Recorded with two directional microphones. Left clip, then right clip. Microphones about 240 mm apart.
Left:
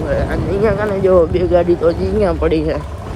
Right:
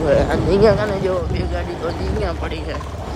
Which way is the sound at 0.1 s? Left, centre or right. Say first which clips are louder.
Right 3 dB; centre.